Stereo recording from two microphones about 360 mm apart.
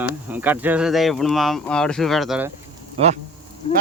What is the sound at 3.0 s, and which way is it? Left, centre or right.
Speech, centre.